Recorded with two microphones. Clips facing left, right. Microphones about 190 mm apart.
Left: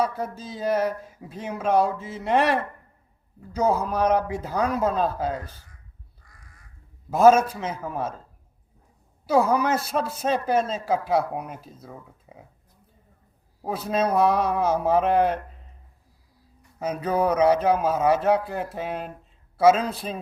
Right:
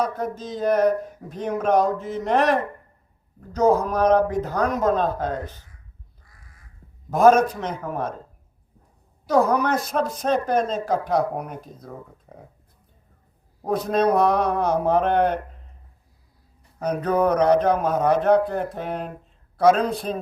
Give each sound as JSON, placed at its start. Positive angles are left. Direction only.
{"t": 0.0, "sound": "speech", "side_deg": 10}
{"t": 7.1, "sound": "speech", "side_deg": 5}
{"t": 9.2, "sound": "a man's voice", "side_deg": 5}
{"t": 13.6, "sound": "a man's voice", "side_deg": 5}
{"t": 16.8, "sound": "a man's voice", "side_deg": 5}